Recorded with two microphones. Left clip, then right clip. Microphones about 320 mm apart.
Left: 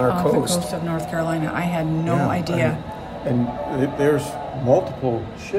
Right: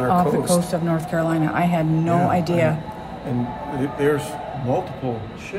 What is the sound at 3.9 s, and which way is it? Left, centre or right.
Speech, left.